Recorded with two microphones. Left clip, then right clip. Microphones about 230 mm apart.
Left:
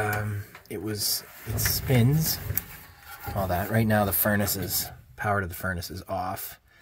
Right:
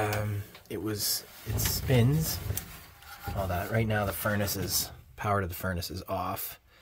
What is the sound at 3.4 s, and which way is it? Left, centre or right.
Speech, centre.